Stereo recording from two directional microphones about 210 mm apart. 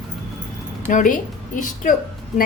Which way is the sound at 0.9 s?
40° left (ahead or behind).